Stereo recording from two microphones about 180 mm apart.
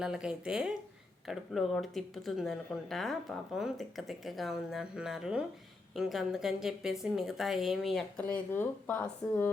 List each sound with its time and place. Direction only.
0.0 s speech: 5° right (ahead or behind)